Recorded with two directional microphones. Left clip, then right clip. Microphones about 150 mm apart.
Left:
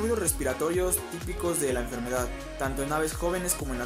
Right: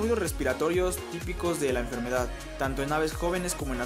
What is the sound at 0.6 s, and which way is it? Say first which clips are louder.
Speech: right 1 dB; 25° right (ahead or behind).